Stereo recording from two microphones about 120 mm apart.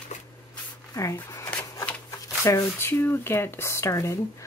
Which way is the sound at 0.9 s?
25° left (ahead or behind).